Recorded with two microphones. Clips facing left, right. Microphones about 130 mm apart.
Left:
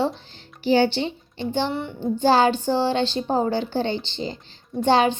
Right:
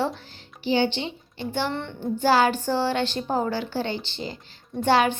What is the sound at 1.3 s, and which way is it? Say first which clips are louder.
Speech: left 3 dB; 20° left (ahead or behind).